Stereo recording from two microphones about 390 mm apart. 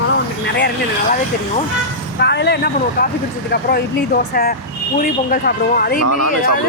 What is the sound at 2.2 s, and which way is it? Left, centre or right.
Speech, left.